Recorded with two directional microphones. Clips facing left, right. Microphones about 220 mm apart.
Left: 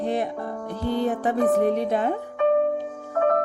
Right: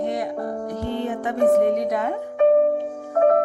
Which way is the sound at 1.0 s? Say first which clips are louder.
Right 3 dB; 35° left (ahead or behind).